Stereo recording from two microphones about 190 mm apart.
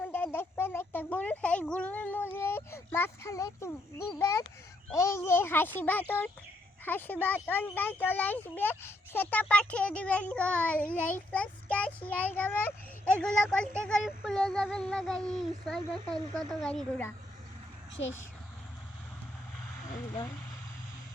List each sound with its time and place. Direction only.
0.0 s a sound: 10° left (ahead or behind)
4.9 s a child's voice: 15° left (ahead or behind)
13.1 s child singing: 5° left (ahead or behind)
18.0 s speech: 70° left (ahead or behind)